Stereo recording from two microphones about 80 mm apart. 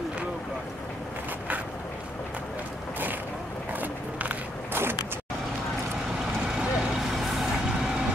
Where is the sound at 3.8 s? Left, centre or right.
Right.